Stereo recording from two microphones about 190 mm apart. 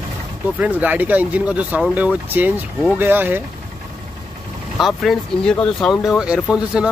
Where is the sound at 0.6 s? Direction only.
10° right (ahead or behind).